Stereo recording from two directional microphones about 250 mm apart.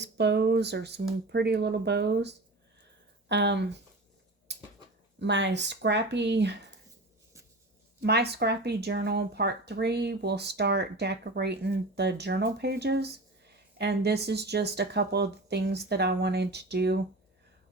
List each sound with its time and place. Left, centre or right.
0.0 s speech: right
4.5 s a sound: right
5.2 s speech: right
8.0 s speech: right